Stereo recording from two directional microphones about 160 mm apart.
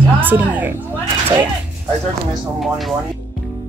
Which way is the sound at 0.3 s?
10° right (ahead or behind).